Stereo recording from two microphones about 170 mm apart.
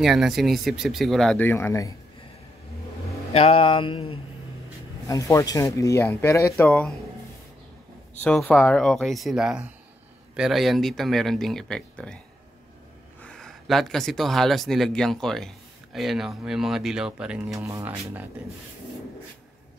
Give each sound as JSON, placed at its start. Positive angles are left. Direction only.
{"t": 0.0, "sound": "speech", "side_deg": 0}
{"t": 3.3, "sound": "a sound", "side_deg": 35}
{"t": 5.0, "sound": "speech", "side_deg": 20}
{"t": 8.2, "sound": "speech", "side_deg": 10}
{"t": 13.2, "sound": "speech", "side_deg": 5}
{"t": 17.6, "sound": "speech", "side_deg": -15}